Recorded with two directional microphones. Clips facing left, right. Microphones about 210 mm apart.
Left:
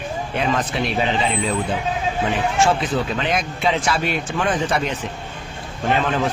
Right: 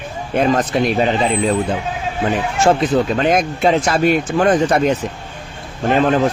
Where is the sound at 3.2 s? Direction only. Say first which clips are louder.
Right 7 dB; 45° right (ahead or behind).